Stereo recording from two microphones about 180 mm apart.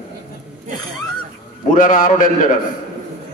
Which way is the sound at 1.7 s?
50° left (ahead or behind).